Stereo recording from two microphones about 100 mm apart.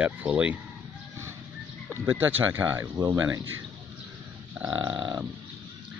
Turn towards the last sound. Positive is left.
turn(degrees=-10)  # may be behind; listen again after turning